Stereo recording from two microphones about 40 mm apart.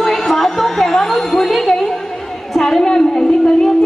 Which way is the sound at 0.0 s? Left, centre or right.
Centre.